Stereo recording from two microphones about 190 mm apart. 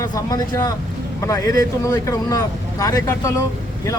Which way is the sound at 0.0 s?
20° left (ahead or behind).